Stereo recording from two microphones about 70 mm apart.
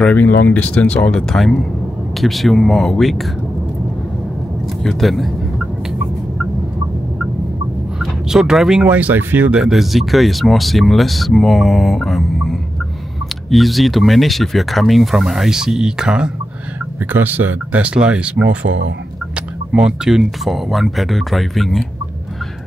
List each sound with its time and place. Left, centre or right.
0.1 s speech: left
1.3 s speech: centre
4.8 s speech: centre
8.0 s speech: centre
8.8 s speech: right
9.5 s speech: centre
17.1 s speech: right
19.7 s speech: centre